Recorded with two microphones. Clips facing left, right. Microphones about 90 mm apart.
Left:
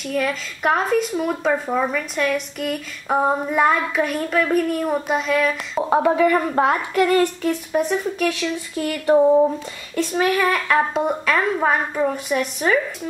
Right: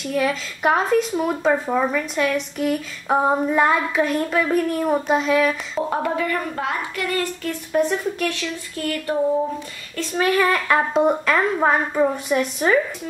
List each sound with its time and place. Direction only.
0.0 s speech: centre (ahead or behind)
5.9 s speech: 15° left (ahead or behind)
6.5 s a woman's voice: 40° left (ahead or behind)
7.1 s a sound: 20° left (ahead or behind)
7.7 s speech: 5° left (ahead or behind)
10.1 s speech: 5° left (ahead or behind)